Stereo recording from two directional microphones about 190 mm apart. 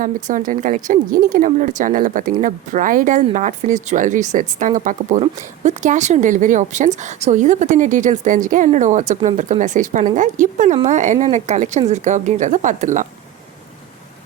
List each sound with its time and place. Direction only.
0.0 s speech: 45° right (ahead or behind)